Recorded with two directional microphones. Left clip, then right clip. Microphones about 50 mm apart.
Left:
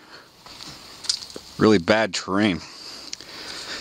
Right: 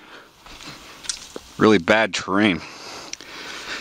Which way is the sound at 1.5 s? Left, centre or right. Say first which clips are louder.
Right 2 dB; centre.